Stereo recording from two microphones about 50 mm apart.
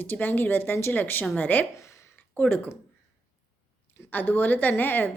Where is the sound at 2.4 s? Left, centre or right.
Left.